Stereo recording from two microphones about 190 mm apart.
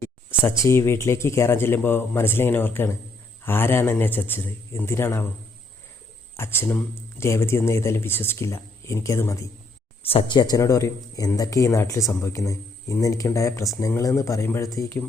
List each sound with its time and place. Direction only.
0.3 s speech: 15° left (ahead or behind)
6.3 s speech: 10° left (ahead or behind)
10.0 s speech: 30° left (ahead or behind); by 15.0 s 15° left (ahead or behind)